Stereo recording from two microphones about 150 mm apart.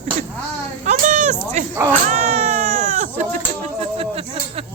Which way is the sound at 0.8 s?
55° right (ahead or behind).